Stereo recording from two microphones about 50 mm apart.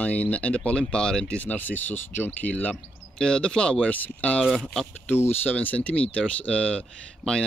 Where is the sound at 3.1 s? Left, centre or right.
Centre.